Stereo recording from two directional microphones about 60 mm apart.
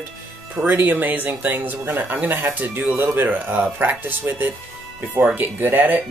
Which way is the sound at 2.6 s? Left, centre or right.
Right.